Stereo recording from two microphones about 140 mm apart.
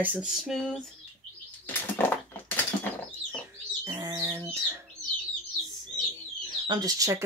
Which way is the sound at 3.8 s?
25° right (ahead or behind).